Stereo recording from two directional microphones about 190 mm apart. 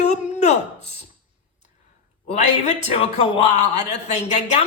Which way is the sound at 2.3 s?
40° left (ahead or behind).